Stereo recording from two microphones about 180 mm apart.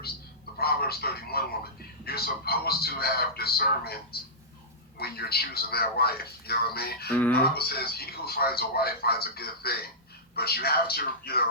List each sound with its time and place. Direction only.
0.6 s speech: 60° left (ahead or behind)
7.1 s speech: 10° left (ahead or behind)
7.5 s speech: 60° left (ahead or behind)